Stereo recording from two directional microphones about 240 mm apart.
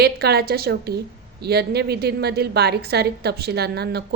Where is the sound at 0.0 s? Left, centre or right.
Right.